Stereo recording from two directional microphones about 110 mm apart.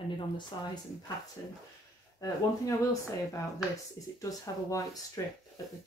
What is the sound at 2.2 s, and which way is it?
Speech, 30° left (ahead or behind).